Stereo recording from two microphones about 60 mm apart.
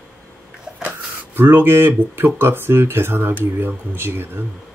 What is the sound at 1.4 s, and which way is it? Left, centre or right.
Speech, right.